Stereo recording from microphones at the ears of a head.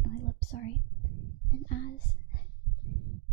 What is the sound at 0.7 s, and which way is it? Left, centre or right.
Whispering, right.